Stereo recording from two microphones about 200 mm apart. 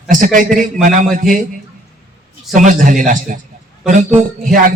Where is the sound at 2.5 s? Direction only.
40° right (ahead or behind).